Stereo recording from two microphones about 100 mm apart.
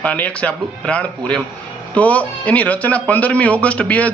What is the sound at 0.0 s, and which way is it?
A man's voice, 15° left (ahead or behind).